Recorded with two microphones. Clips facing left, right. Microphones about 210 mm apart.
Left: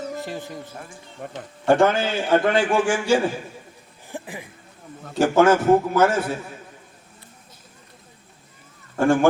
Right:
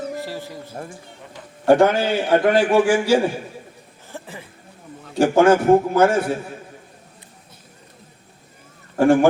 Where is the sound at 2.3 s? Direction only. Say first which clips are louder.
Right 3 dB; 10° right (ahead or behind).